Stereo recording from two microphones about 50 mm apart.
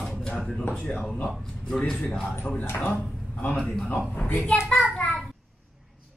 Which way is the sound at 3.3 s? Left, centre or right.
Left.